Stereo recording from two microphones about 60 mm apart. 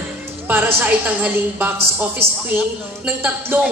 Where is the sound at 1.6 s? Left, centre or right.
Right.